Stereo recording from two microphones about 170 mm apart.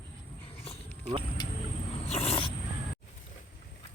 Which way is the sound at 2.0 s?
35° left (ahead or behind).